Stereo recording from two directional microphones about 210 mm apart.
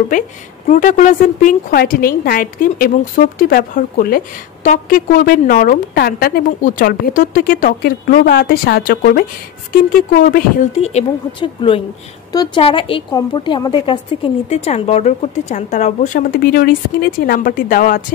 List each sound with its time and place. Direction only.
0.1 s a woman's voice: 40° left (ahead or behind)